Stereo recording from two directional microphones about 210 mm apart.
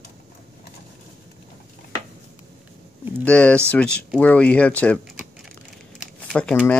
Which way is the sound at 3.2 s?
5° left (ahead or behind).